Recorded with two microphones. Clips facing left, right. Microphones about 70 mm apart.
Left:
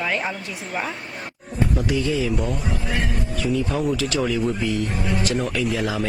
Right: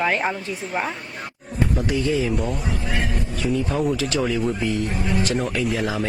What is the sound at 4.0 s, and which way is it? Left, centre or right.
Speech, right.